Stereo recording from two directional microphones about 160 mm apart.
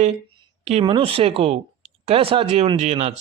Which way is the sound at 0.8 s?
35° right (ahead or behind).